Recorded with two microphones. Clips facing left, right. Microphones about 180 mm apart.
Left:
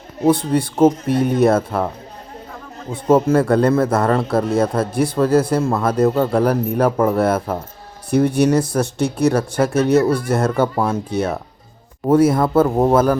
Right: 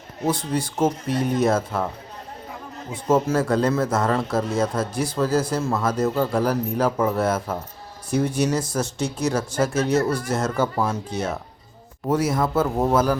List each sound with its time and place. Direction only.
0.3 s a man's voice: 60° left (ahead or behind)
2.9 s a man's voice: 60° left (ahead or behind)